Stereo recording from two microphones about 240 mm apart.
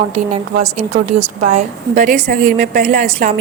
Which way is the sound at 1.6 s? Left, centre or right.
Right.